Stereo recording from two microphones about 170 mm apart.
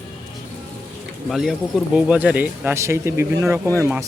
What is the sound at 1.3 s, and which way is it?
Speech, centre (ahead or behind).